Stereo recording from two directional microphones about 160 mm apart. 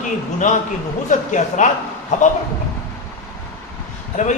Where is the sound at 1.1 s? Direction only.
50° left (ahead or behind).